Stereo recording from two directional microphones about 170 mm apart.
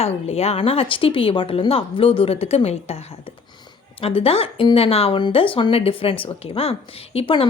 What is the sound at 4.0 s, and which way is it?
A woman's voice, 35° left (ahead or behind).